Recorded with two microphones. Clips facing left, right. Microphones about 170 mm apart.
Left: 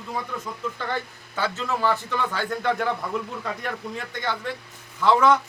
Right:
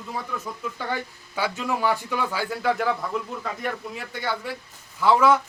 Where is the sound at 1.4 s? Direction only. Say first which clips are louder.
Even; 10° right (ahead or behind).